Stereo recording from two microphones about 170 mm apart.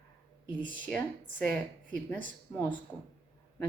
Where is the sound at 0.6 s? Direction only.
10° left (ahead or behind).